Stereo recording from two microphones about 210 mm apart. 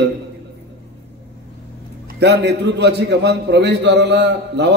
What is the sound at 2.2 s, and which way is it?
A man's voice, 55° right (ahead or behind).